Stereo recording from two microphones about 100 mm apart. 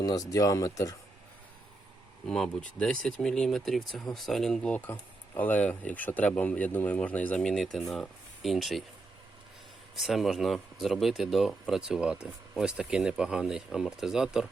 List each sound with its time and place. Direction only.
0.0 s speech: 40° left (ahead or behind)
2.2 s speech: 5° left (ahead or behind)
9.9 s speech: 5° right (ahead or behind)